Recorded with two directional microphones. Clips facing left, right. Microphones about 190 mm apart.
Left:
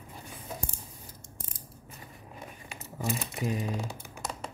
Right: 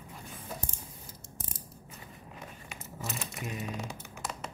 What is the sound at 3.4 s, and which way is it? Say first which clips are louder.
Speech: left 6 dB; 30° left (ahead or behind).